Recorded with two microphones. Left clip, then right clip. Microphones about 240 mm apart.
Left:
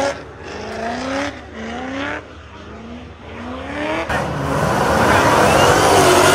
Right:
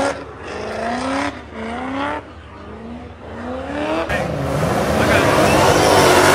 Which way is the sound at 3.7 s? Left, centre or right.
Right.